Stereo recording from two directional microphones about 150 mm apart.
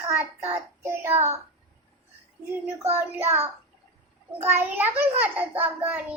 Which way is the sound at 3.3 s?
15° right (ahead or behind).